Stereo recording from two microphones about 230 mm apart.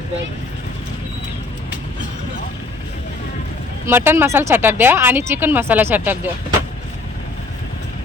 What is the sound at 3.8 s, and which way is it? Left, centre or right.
Speech, centre.